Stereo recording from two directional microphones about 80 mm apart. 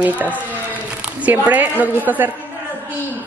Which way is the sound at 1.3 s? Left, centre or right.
Right.